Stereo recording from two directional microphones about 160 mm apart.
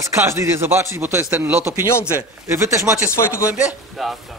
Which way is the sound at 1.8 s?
15° left (ahead or behind).